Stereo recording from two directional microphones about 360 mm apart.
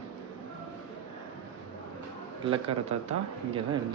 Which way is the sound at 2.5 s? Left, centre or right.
Centre.